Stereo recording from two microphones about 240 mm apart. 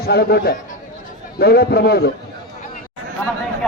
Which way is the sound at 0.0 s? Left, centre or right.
Left.